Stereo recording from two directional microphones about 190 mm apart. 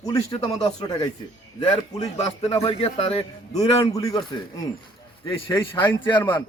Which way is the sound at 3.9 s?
20° left (ahead or behind).